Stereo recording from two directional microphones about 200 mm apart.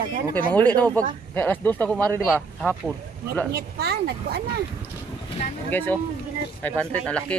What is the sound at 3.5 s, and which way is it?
Speech, 55° right (ahead or behind).